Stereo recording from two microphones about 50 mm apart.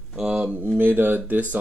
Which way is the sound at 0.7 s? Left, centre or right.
Right.